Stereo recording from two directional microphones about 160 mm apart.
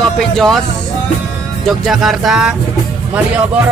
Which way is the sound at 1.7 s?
Centre (ahead or behind).